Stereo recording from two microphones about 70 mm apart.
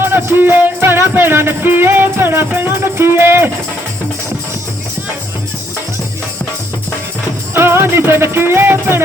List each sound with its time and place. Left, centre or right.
0.0 s music: right
7.5 s music: right